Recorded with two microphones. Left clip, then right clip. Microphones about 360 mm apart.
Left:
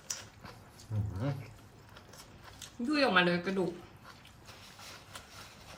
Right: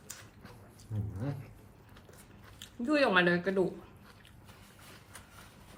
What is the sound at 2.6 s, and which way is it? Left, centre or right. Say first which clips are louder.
Speech: right 2 dB; centre.